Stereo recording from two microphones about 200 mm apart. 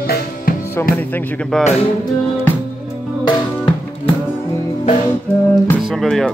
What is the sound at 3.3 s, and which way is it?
Music, 20° left (ahead or behind).